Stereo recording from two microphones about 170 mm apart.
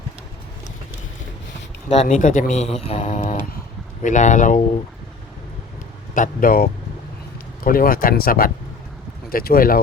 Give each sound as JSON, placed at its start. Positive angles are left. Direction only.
{"t": 1.9, "sound": "speech", "side_deg": 40}
{"t": 3.2, "sound": "a sound", "side_deg": 55}
{"t": 4.0, "sound": "speech", "side_deg": 45}
{"t": 6.1, "sound": "speech", "side_deg": 55}